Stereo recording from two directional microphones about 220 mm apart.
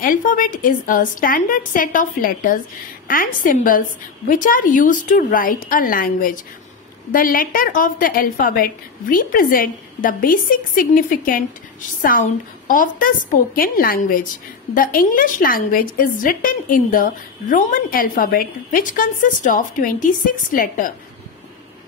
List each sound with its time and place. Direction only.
0.0 s a woman's voice: 35° left (ahead or behind)